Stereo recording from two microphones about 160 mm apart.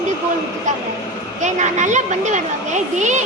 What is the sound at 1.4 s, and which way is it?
Speech, 50° right (ahead or behind).